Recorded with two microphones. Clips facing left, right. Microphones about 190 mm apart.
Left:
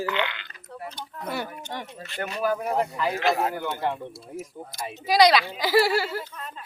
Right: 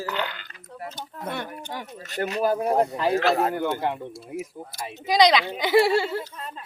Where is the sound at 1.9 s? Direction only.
40° right (ahead or behind).